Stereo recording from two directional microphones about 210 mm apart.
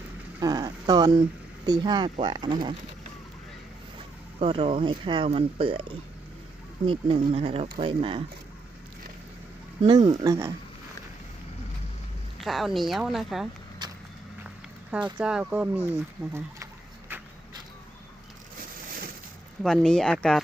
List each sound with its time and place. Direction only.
0.3 s speech: 15° right (ahead or behind)
4.4 s speech: 25° right (ahead or behind)
6.8 s speech: 25° right (ahead or behind)
9.8 s speech: 20° right (ahead or behind)
12.4 s a woman's voice: centre (ahead or behind)
13.8 s vehicle: 20° right (ahead or behind)
14.4 s a sound: 5° right (ahead or behind)
15.2 s a woman's voice: 5° right (ahead or behind)
19.6 s a woman's voice: 5° left (ahead or behind)